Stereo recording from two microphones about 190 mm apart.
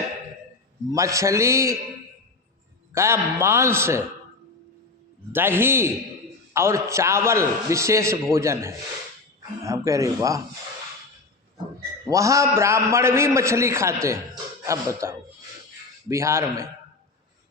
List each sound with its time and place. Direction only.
0.9 s a man's voice: 15° right (ahead or behind)
2.9 s a man's voice: 15° right (ahead or behind)
5.3 s a man's voice: 10° right (ahead or behind)
12.0 s a man's voice: 15° right (ahead or behind)